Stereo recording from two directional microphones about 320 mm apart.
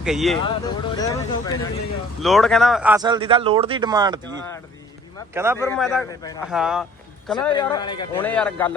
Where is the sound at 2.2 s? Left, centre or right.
Centre.